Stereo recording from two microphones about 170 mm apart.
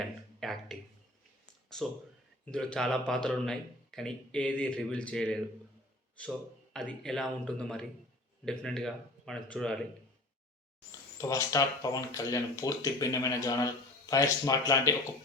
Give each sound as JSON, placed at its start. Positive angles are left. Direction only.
{"t": 0.0, "sound": "a sound", "side_deg": 0}
{"t": 1.7, "sound": "speech", "side_deg": 0}
{"t": 6.7, "sound": "speech", "side_deg": 5}
{"t": 11.2, "sound": "speech", "side_deg": 20}